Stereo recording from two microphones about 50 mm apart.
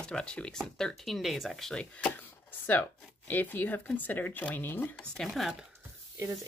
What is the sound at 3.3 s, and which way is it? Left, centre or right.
Speech, left.